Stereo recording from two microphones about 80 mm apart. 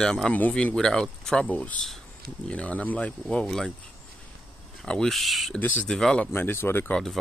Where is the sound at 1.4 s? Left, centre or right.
Centre.